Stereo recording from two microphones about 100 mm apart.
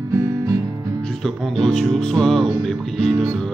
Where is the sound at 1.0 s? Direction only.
Centre (ahead or behind).